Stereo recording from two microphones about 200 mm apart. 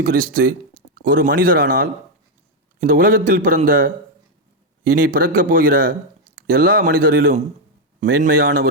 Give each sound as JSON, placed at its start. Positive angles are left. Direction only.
{"t": 0.0, "sound": "a man's voice", "side_deg": -45}